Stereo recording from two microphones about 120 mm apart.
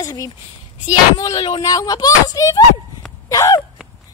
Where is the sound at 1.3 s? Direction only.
45° left (ahead or behind).